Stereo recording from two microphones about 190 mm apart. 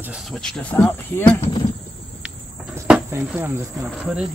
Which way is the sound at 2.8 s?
5° right (ahead or behind).